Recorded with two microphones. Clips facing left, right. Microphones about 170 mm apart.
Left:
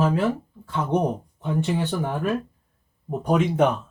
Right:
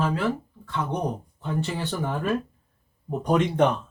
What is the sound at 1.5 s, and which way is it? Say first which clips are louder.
Speech: left 4 dB; 15° left (ahead or behind).